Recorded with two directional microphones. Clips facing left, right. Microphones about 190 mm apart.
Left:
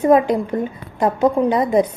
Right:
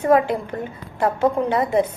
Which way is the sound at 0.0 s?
15° left (ahead or behind).